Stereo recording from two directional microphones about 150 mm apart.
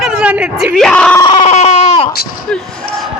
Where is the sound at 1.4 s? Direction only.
50° left (ahead or behind).